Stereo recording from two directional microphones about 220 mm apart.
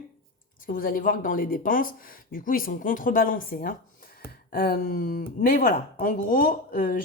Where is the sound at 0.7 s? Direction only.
40° left (ahead or behind).